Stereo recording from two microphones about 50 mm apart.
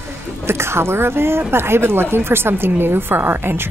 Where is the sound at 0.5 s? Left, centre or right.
Right.